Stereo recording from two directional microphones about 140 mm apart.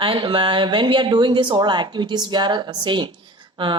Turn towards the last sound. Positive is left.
turn(degrees=-35)  # may be behind; listen again after turning